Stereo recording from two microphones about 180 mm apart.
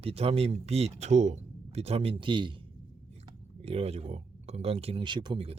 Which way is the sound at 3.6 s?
35° right (ahead or behind).